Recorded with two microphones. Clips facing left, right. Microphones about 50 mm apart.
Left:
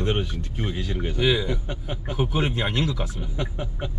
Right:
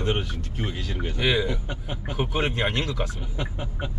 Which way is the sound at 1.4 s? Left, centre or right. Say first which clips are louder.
Left 1 dB; centre.